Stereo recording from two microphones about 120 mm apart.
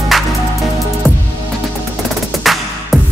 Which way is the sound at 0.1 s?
Centre (ahead or behind).